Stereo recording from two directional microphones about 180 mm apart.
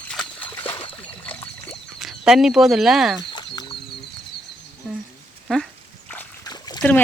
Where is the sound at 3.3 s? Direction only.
25° left (ahead or behind).